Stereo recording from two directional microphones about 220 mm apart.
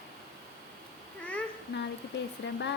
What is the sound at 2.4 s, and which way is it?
Speech, 55° left (ahead or behind).